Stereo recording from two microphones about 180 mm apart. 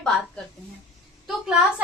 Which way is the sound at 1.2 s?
5° right (ahead or behind).